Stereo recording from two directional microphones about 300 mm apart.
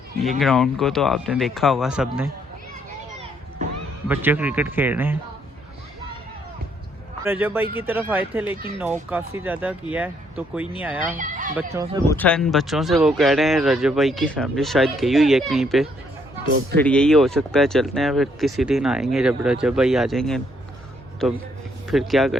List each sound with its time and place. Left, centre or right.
0.2 s speech: centre
4.1 s speech: centre
7.3 s speech: centre
11.2 s a sound: right
11.5 s speech: centre
12.0 s speech: centre